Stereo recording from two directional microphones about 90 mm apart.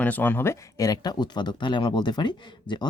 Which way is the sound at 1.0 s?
50° left (ahead or behind).